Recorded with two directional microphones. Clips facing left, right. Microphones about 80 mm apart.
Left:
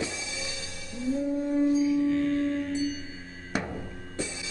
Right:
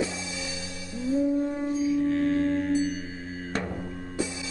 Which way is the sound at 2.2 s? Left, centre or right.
Right.